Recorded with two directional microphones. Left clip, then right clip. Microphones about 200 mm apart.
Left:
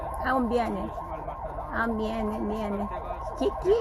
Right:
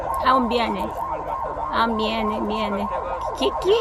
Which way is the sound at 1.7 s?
70° right (ahead or behind).